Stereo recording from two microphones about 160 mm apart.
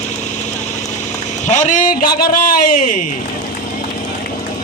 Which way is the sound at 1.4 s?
50° left (ahead or behind).